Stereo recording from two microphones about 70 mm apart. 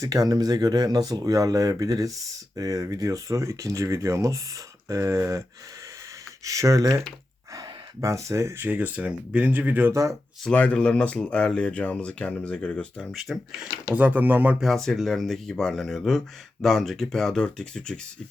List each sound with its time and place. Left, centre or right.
0.0 s speech: right
6.4 s speech: right
8.7 s speech: right
9.9 s speech: right
10.5 s speech: centre
13.0 s speech: centre
13.9 s speech: right
14.6 s speech: centre